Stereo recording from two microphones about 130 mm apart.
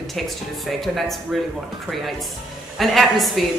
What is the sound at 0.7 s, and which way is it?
Speech, centre (ahead or behind).